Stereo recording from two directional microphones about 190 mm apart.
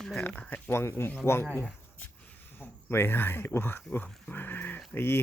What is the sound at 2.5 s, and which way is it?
Speech, 10° left (ahead or behind).